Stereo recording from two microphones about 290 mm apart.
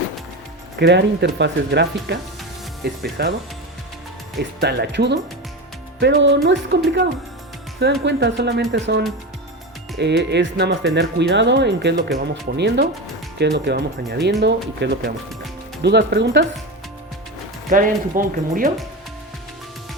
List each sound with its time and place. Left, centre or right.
0.8 s speech: right
4.6 s speech: right
7.8 s speech: right
17.7 s speech: right